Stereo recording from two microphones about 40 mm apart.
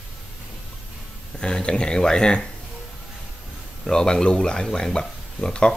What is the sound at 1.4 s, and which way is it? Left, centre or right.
Speech, left.